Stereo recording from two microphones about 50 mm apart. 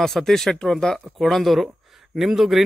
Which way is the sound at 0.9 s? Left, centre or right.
Centre.